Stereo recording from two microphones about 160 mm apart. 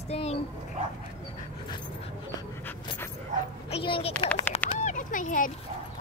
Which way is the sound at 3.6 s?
35° left (ahead or behind).